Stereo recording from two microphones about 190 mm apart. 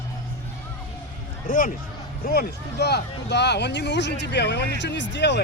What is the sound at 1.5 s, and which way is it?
Speech, 45° left (ahead or behind).